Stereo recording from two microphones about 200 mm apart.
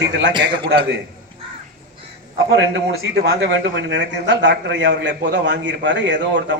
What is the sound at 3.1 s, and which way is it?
A man's voice, 55° right (ahead or behind).